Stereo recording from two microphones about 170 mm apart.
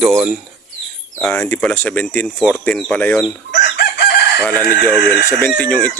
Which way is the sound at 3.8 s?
80° left.